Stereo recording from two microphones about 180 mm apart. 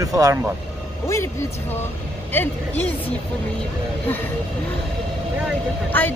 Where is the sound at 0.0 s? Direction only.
20° right (ahead or behind).